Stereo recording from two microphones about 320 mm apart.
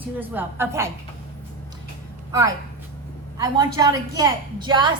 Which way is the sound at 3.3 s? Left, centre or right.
Centre.